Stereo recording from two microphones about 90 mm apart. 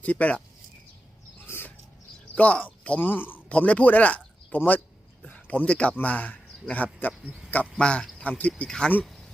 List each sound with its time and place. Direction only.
0.0 s speech: 15° left (ahead or behind)
1.5 s a sound: 25° left (ahead or behind)
2.3 s speech: 15° left (ahead or behind)